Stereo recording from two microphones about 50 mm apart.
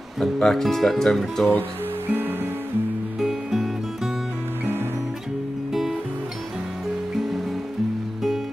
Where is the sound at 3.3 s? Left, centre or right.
Centre.